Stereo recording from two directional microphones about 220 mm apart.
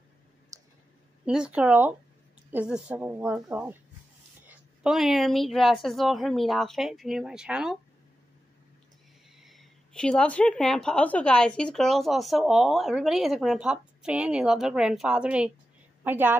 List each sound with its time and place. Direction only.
0.5 s clicking: 15° right (ahead or behind)
1.2 s a woman's voice: 5° right (ahead or behind)
9.4 s a woman's voice: centre (ahead or behind)